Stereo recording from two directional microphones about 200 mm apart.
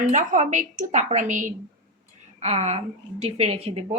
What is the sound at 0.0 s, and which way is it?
A woman's voice, 40° right (ahead or behind).